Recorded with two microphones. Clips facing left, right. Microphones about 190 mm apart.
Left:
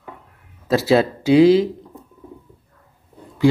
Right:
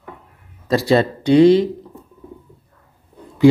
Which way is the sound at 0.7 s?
5° left (ahead or behind).